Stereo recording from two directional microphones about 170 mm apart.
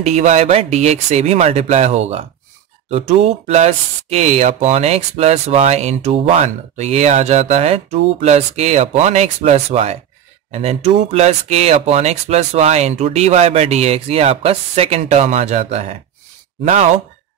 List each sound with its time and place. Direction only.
0.0 s speech: 45° right (ahead or behind)